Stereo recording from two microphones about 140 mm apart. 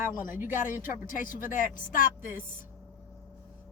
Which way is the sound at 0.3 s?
15° right (ahead or behind).